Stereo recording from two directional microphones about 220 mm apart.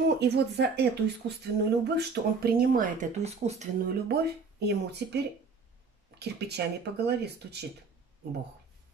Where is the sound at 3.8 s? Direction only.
45° right (ahead or behind).